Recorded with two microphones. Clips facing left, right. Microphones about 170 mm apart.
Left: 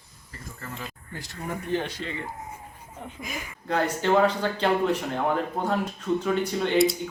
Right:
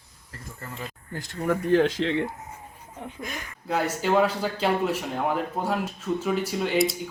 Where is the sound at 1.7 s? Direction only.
90° right.